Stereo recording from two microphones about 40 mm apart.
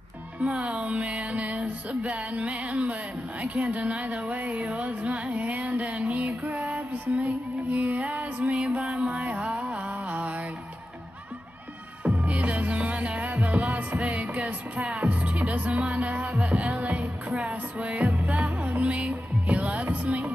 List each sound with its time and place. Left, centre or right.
0.4 s music: right
12.0 s music: right